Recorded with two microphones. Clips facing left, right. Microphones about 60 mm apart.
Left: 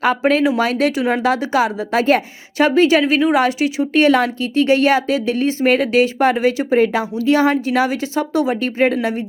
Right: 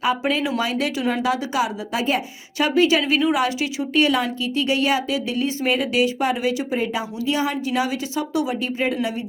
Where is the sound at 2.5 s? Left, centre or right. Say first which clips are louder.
Left 5 dB; left.